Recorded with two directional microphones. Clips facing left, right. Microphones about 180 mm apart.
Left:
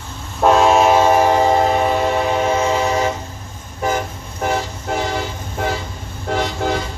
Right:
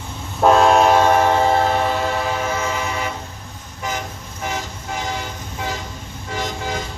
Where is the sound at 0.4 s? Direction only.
Centre (ahead or behind); by 2.0 s 20° left (ahead or behind).